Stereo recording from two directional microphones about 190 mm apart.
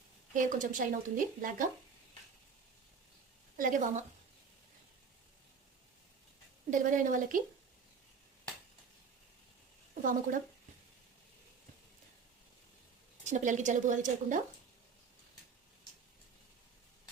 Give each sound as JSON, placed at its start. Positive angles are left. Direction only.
{"t": 0.3, "sound": "speech", "side_deg": -45}
{"t": 3.6, "sound": "speech", "side_deg": -40}
{"t": 6.7, "sound": "speech", "side_deg": -45}
{"t": 9.9, "sound": "a sound", "side_deg": -45}
{"t": 13.2, "sound": "a woman's voice", "side_deg": -40}